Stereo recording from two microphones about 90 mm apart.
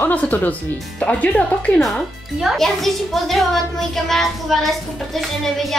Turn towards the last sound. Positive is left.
turn(degrees=5)  # may be behind; listen again after turning